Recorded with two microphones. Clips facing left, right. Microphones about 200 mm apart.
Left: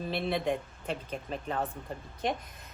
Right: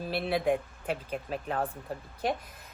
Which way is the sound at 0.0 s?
5° right (ahead or behind).